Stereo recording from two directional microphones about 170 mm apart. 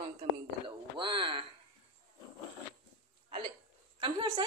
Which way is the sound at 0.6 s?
30° right (ahead or behind).